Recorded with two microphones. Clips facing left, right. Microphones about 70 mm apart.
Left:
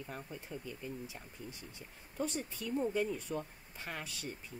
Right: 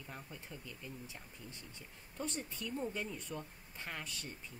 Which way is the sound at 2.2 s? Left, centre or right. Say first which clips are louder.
Left 4 dB; centre.